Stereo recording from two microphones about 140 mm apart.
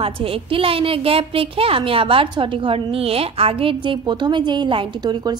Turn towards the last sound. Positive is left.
turn(degrees=-30)  # may be behind; listen again after turning